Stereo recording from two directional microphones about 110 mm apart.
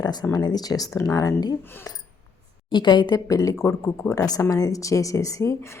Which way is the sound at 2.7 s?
45° left (ahead or behind).